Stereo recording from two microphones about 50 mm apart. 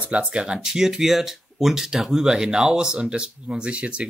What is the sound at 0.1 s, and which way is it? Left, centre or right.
Speech, right.